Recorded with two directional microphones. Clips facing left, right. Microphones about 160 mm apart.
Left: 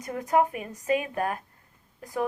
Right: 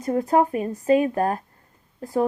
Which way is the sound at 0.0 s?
35° right (ahead or behind).